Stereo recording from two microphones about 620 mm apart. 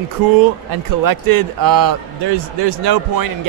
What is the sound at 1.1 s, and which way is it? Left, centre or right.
A man's voice, right.